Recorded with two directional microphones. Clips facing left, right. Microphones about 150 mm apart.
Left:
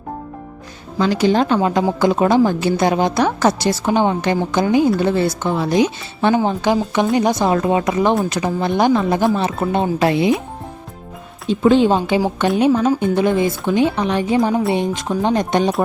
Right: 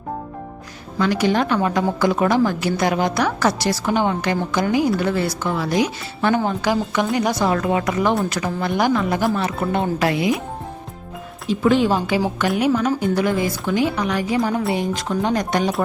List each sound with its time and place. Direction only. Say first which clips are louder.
0.9 s speech: left 3 dB; 30° left (ahead or behind)
11.4 s speech: left 4 dB; 25° left (ahead or behind)